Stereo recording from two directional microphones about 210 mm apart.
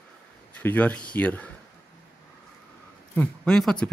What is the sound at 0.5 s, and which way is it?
Speech, 5° left (ahead or behind).